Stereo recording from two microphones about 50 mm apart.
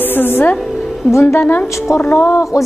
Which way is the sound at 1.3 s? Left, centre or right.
Left.